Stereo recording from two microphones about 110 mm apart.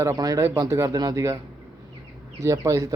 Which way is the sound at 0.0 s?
30° right (ahead or behind).